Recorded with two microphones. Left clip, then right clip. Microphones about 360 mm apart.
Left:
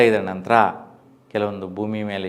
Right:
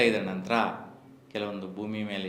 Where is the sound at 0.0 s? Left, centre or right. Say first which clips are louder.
Left 8 dB; left.